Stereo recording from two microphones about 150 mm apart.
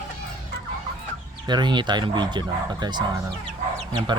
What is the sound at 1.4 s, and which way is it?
Speech, 30° right (ahead or behind).